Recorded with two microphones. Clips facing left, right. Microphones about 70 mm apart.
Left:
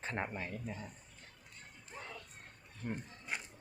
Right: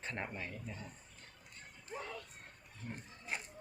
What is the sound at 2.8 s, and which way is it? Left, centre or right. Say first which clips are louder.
Speech: left 6 dB; left.